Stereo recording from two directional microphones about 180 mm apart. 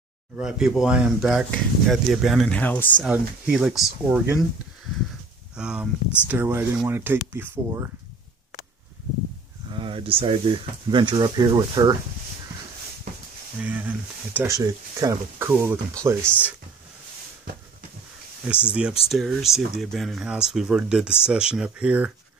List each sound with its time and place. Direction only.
0.4 s speech: 5° right (ahead or behind)
2.6 s speech: 10° left (ahead or behind)
3.0 s speech: centre (ahead or behind)
5.6 s speech: 5° right (ahead or behind)
9.7 s speech: 30° right (ahead or behind)
13.6 s speech: 10° right (ahead or behind)
18.4 s speech: 5° right (ahead or behind)